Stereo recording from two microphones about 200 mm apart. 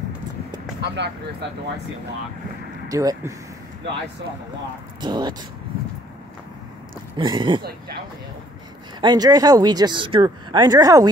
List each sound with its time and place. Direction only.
0.7 s speech: 60° right (ahead or behind)
2.9 s speech: 15° right (ahead or behind)
5.0 s speech: 20° right (ahead or behind)
7.2 s speech: 25° right (ahead or behind)
9.0 s speech: 20° right (ahead or behind)